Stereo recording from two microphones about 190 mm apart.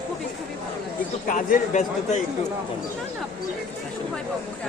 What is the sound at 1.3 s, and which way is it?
Speech, 40° left (ahead or behind).